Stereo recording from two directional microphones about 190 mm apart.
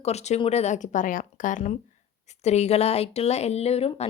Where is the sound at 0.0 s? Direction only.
35° left (ahead or behind).